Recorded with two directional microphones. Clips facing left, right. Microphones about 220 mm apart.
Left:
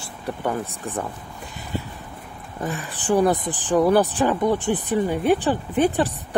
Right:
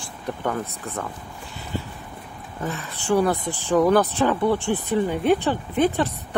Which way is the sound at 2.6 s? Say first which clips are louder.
Left 1 dB; 15° left (ahead or behind).